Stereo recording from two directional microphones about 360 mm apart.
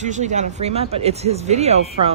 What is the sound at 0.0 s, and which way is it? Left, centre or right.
Speech, centre.